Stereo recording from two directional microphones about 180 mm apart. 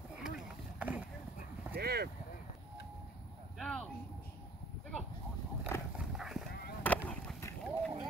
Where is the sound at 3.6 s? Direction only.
5° left (ahead or behind).